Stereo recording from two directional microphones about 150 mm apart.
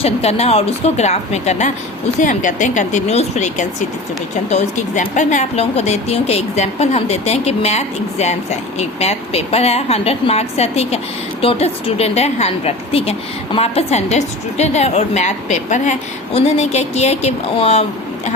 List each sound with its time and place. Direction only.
0.0 s speech: 45° left (ahead or behind)